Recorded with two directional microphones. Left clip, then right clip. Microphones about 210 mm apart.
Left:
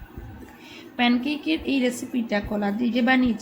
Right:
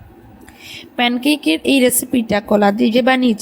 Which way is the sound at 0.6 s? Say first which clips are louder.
Right 6 dB; 40° right (ahead or behind).